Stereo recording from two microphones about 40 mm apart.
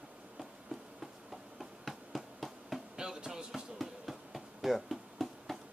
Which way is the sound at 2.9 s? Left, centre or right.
Centre.